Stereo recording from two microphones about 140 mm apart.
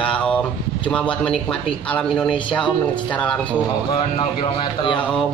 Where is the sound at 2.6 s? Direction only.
35° left (ahead or behind).